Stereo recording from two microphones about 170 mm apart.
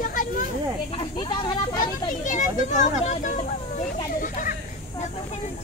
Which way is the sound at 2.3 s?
45° left (ahead or behind).